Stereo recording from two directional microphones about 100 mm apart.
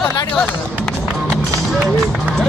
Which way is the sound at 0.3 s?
15° left (ahead or behind).